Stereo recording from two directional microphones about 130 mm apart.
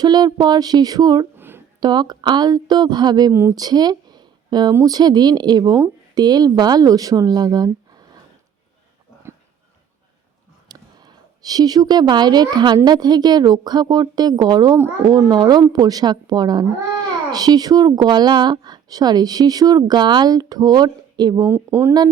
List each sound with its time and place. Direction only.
0.0 s a woman's voice: 30° right (ahead or behind)
1.4 s a sound: 15° right (ahead or behind)
1.8 s a woman's voice: 35° right (ahead or behind)
3.5 s a sound: 30° right (ahead or behind)
4.7 s a woman's voice: 25° right (ahead or behind)
10.7 s a woman's voice: 30° right (ahead or behind)
21.4 s speech: 20° right (ahead or behind)